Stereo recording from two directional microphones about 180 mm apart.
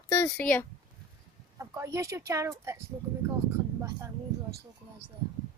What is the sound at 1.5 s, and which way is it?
Speech, 15° right (ahead or behind).